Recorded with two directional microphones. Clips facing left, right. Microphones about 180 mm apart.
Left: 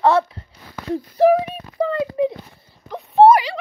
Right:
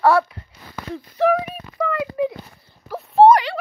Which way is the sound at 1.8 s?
30° left (ahead or behind).